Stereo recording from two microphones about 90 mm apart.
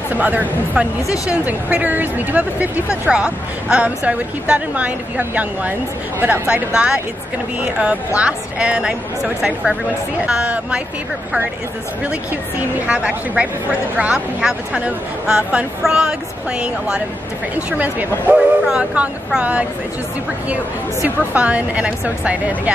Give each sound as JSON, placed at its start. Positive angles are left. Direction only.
{"t": 0.1, "sound": "speech", "side_deg": -20}
{"t": 1.0, "sound": "a woman's voice", "side_deg": 40}
{"t": 1.3, "sound": "speech", "side_deg": -15}
{"t": 12.8, "sound": "speech", "side_deg": -10}
{"t": 21.3, "sound": "speech", "side_deg": -15}